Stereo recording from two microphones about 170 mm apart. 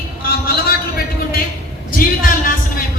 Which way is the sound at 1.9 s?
55° left (ahead or behind).